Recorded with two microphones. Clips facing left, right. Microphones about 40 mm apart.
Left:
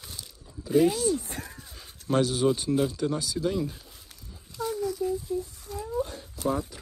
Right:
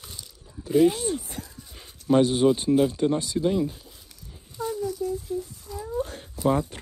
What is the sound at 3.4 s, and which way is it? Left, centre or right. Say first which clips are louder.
Speech: right 4 dB; centre.